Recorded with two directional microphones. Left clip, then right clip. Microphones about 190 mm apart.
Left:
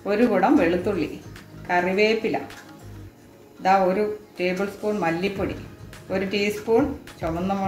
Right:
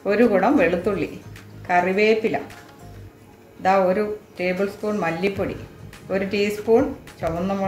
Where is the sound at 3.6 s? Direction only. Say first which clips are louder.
Right 1 dB; 30° right (ahead or behind).